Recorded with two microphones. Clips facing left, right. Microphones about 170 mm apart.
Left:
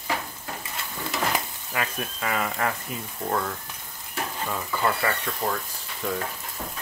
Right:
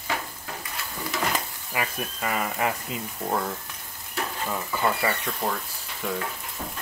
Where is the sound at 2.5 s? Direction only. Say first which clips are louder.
Right 1 dB; 20° right (ahead or behind).